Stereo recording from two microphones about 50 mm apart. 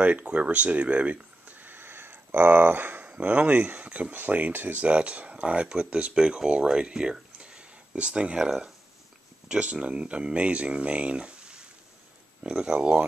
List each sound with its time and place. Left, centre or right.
0.0 s speech: right
4.8 s speech: right